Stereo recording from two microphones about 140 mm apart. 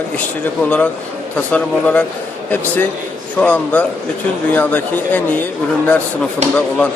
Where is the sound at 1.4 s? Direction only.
10° left (ahead or behind).